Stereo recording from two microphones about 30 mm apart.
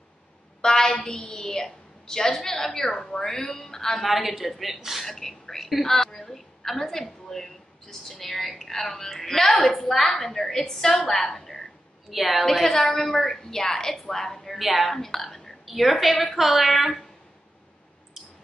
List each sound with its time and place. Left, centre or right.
0.6 s a sound: left
1.1 s a woman's voice: left
3.3 s speech: left
3.6 s a woman's voice: centre
4.0 s a woman's voice: centre
5.0 s a woman's voice: centre
12.1 s a woman's voice: centre
12.9 s a woman's voice: centre
14.6 s a woman's voice: centre
15.0 s speech: centre
15.6 s a woman's voice: centre